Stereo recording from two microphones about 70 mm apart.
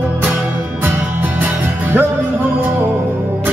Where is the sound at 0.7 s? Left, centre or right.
Right.